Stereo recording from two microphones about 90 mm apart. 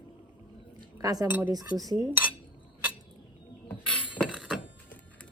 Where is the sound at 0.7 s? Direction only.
45° right (ahead or behind).